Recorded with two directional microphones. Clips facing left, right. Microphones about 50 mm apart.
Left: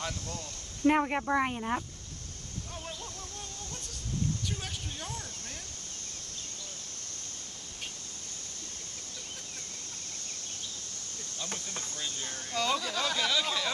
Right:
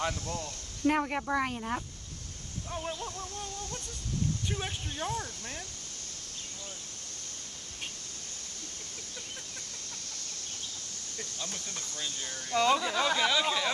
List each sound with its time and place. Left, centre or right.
0.0 s speech: right
0.8 s speech: centre
2.7 s speech: right
4.5 s speech: right
11.7 s speech: left
12.4 s speech: right